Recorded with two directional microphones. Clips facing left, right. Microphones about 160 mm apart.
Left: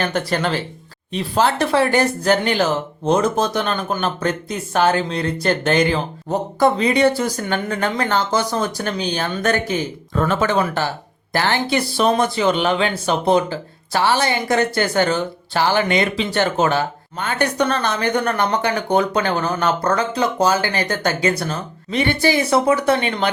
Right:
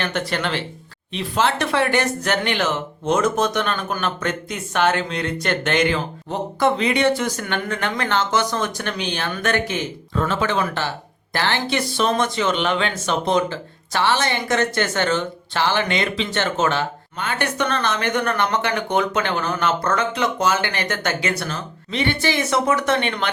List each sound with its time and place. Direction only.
0.0 s speech: 40° left (ahead or behind)